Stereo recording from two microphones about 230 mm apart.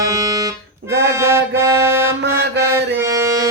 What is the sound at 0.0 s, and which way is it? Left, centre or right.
Music, centre.